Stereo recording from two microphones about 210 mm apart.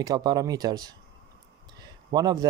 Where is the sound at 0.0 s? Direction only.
20° right (ahead or behind).